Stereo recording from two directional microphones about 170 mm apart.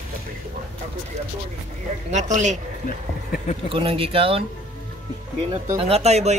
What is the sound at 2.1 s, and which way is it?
Speech, 45° right (ahead or behind).